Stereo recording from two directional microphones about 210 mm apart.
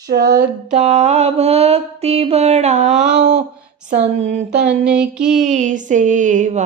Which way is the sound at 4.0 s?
35° right (ahead or behind).